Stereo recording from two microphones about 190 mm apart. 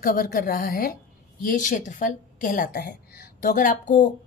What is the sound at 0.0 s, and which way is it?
A woman's voice, 45° left (ahead or behind).